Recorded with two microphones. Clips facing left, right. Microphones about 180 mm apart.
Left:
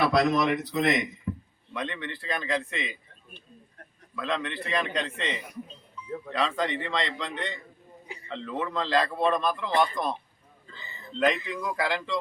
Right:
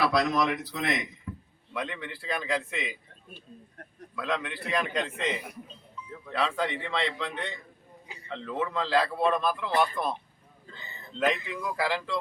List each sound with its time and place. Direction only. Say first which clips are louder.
0.0 s a man's voice: left 2 dB; centre (ahead or behind)
1.3 s a sound: left 7 dB; 25° left (ahead or behind)
1.7 s a man's voice: left 1 dB; 5° right (ahead or behind)
4.1 s a man's voice: left 1 dB; 5° right (ahead or behind)
11.2 s a man's voice: left 2 dB; 5° right (ahead or behind)